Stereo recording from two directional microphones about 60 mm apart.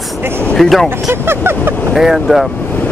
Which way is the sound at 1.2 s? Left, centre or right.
Right.